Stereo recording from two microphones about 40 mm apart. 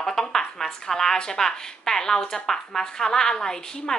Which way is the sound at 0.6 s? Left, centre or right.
Centre.